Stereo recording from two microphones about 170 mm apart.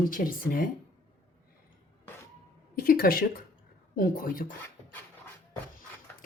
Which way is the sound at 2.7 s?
60° left (ahead or behind).